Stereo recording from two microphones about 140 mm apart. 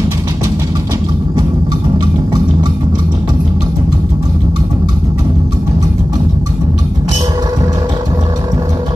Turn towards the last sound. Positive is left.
turn(degrees=-30)  # may be behind; listen again after turning